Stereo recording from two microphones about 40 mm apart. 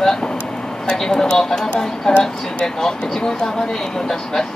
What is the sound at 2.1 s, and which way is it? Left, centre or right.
Speech, left.